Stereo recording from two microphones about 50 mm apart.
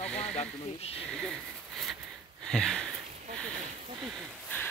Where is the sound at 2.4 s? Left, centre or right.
Centre.